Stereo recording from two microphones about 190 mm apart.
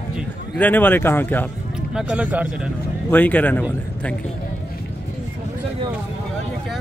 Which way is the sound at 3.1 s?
10° left (ahead or behind).